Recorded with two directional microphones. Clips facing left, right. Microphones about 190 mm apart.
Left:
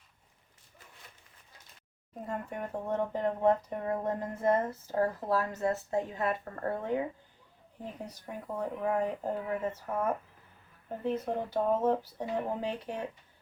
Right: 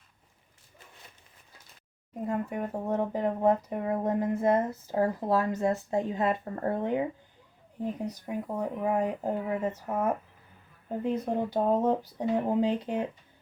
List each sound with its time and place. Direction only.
2.2 s speech: 15° right (ahead or behind)
8.0 s speech: 15° right (ahead or behind)